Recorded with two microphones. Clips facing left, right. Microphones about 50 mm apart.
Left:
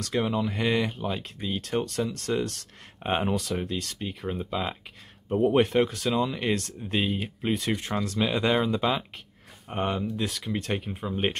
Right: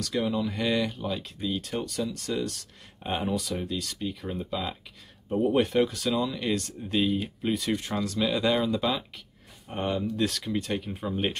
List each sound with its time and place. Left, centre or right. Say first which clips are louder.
0.0 s speech: left 1 dB; left
1.6 s speech: left 3 dB; left
5.6 s speech: left 1 dB; left
8.2 s speech: left 1 dB; left
10.1 s speech: right 3 dB; centre
10.7 s speech: left 1 dB; left